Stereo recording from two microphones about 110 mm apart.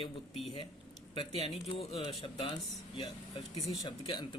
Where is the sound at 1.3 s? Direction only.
60° left (ahead or behind).